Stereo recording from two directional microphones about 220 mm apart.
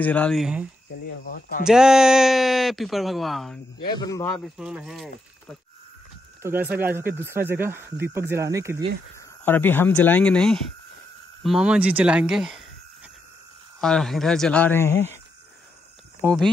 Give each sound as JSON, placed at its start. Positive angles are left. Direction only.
{"t": 0.0, "sound": "speech", "side_deg": 5}
{"t": 1.7, "sound": "speech", "side_deg": -5}
{"t": 3.8, "sound": "speech", "side_deg": 20}
{"t": 4.6, "sound": "speech", "side_deg": -5}
{"t": 6.4, "sound": "speech", "side_deg": -10}
{"t": 9.4, "sound": "speech", "side_deg": 10}
{"t": 16.2, "sound": "speech", "side_deg": -10}